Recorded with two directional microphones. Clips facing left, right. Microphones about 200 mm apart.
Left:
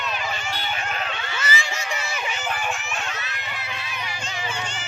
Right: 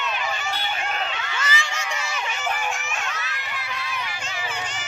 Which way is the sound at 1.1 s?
30° left (ahead or behind).